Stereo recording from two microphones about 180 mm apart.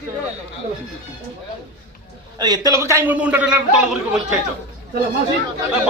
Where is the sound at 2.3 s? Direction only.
20° right (ahead or behind); by 4.4 s 5° right (ahead or behind).